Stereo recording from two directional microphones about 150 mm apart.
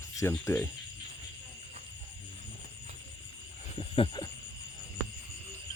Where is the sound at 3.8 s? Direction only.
35° left (ahead or behind).